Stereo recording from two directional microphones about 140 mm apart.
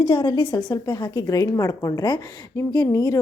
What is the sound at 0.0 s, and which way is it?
A woman's voice, 35° left (ahead or behind).